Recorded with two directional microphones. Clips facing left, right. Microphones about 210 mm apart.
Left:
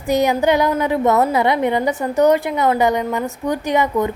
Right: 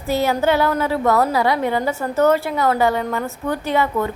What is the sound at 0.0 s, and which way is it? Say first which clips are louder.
A woman's voice: left 2 dB; 15° left (ahead or behind).